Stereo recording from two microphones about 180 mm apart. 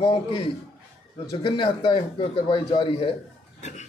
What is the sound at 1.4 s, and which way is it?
A man's voice, 25° left (ahead or behind).